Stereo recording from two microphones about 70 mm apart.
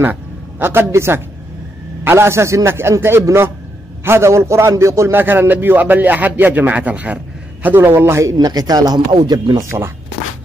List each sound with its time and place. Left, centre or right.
0.0 s a man's voice: right
5.1 s a man's voice: right